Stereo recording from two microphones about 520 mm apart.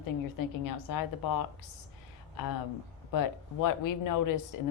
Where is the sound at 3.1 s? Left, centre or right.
Left.